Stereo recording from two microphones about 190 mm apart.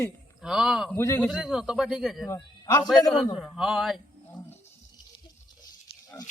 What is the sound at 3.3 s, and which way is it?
Speech, 5° right (ahead or behind).